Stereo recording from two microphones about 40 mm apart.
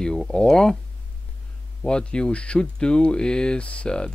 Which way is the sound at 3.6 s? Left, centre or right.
Left.